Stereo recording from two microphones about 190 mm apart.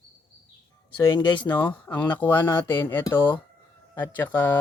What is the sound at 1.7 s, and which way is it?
Speech, 10° left (ahead or behind).